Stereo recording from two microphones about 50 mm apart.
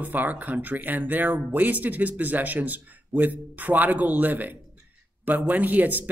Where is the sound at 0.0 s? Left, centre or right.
Right.